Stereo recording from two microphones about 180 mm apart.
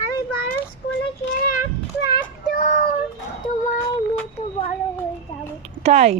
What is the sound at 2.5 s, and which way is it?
Child singing, 40° left (ahead or behind).